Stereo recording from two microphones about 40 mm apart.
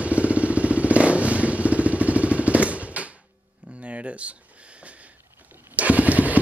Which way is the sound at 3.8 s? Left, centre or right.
Right.